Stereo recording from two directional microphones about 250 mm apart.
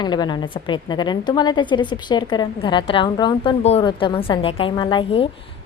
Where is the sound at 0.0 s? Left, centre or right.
Centre.